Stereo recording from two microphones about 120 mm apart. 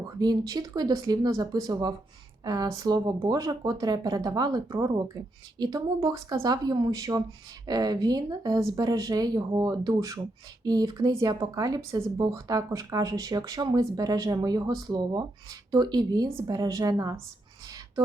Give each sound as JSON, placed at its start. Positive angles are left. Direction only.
{"t": 0.2, "sound": "a woman's voice", "side_deg": -35}